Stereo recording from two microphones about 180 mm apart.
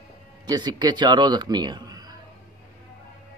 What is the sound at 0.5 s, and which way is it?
Speech, 25° right (ahead or behind).